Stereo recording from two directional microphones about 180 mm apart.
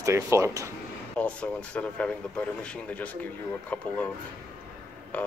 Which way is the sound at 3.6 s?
10° left (ahead or behind).